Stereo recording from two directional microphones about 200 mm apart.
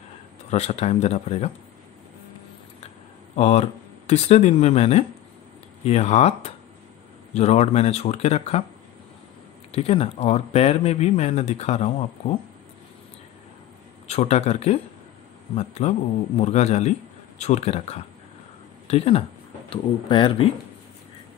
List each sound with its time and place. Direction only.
0.5 s speech: 35° left (ahead or behind)
3.3 s speech: 30° left (ahead or behind)
9.7 s speech: 30° left (ahead or behind)
14.0 s a man's voice: 30° left (ahead or behind)